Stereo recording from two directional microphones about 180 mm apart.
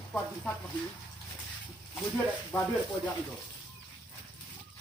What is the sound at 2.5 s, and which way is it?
Speech, 15° left (ahead or behind).